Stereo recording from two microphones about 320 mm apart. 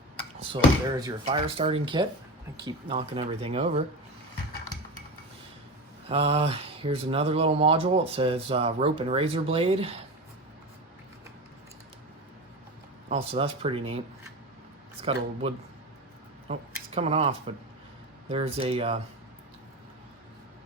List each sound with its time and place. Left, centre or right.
0.3 s speech: centre
6.1 s speech: centre
13.1 s speech: centre
15.0 s speech: centre